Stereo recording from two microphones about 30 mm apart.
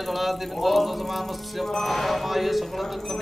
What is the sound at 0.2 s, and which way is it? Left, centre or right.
Speech, centre.